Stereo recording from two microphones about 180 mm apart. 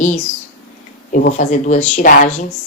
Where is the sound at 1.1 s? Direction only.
45° left (ahead or behind).